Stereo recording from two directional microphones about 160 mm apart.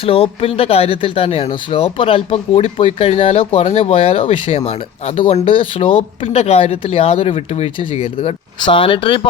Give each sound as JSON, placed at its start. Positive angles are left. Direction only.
{"t": 0.0, "sound": "speech", "side_deg": 35}